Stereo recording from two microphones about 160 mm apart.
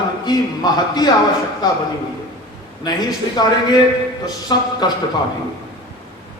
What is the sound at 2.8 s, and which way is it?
A man's voice, 25° left (ahead or behind).